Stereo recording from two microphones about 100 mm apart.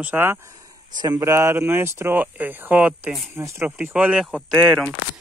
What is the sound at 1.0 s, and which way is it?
Speech, 45° right (ahead or behind).